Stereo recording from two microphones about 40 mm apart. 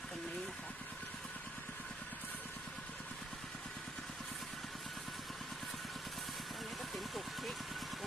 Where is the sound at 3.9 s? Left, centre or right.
Centre.